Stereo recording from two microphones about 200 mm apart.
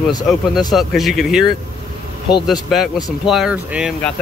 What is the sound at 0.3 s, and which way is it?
Speech, centre (ahead or behind).